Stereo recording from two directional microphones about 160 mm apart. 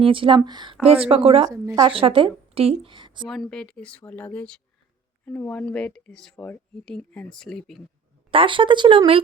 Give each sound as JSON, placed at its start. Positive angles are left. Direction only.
{"t": 0.0, "sound": "speech", "side_deg": -35}
{"t": 1.5, "sound": "a woman's voice", "side_deg": -20}
{"t": 1.8, "sound": "a woman's voice", "side_deg": -35}
{"t": 3.2, "sound": "speech", "side_deg": 0}
{"t": 8.3, "sound": "speech", "side_deg": -35}